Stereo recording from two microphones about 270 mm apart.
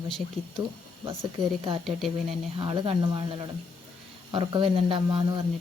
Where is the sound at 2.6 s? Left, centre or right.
Centre.